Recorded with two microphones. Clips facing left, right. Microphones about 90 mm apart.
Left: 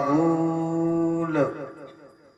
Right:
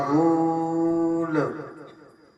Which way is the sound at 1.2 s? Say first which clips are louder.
Left 1 dB; 10° right (ahead or behind).